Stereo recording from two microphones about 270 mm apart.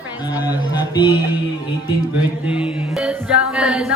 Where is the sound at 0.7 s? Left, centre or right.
Centre.